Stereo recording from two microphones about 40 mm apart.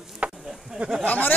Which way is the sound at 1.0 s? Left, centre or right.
Left.